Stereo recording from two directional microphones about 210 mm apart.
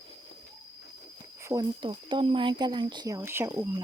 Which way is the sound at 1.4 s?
15° right (ahead or behind).